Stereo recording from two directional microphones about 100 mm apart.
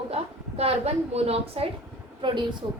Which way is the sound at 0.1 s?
85° right.